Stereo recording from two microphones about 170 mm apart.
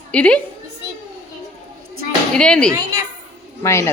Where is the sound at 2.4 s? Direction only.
5° left (ahead or behind).